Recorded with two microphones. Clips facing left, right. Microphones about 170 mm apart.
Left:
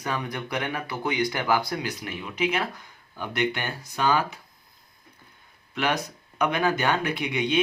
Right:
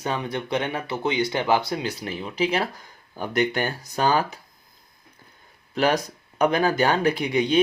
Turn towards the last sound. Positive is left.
turn(degrees=-35)  # may be behind; listen again after turning